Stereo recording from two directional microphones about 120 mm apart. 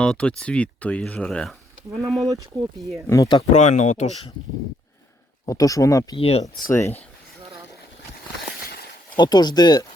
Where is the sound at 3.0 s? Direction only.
30° left (ahead or behind).